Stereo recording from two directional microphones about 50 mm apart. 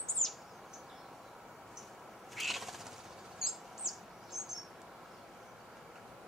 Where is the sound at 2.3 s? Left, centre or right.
Centre.